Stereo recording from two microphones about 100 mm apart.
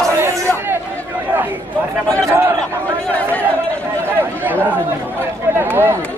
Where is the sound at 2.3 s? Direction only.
25° right (ahead or behind).